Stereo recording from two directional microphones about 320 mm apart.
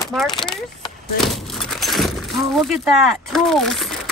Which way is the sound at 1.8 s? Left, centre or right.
Centre.